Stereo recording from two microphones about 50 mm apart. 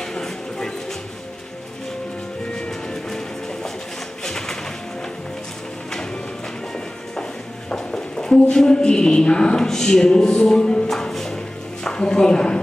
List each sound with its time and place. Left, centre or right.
0.0 s music: centre
2.5 s music: centre
4.2 s music: centre
7.7 s speech: centre
10.9 s music: centre
11.8 s speech: centre